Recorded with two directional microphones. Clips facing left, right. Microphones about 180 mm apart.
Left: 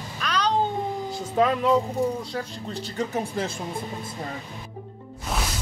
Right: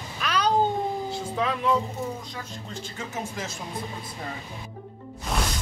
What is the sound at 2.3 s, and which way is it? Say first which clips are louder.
Speech: left 6 dB; 35° left (ahead or behind).